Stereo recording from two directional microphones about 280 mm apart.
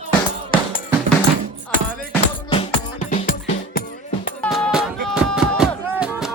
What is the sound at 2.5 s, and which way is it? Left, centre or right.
Music, left.